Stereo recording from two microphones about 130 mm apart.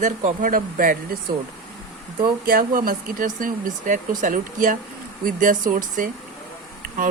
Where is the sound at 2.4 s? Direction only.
90° right.